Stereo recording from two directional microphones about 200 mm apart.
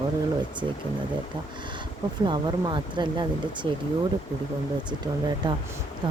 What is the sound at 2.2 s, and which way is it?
Speech, 20° right (ahead or behind).